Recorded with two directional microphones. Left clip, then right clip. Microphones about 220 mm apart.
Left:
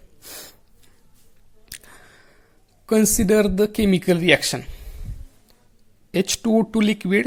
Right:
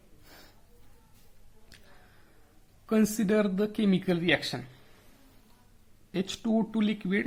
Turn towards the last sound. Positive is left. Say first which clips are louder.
# left 10 dB
turn(degrees=35)  # may be behind; listen again after turning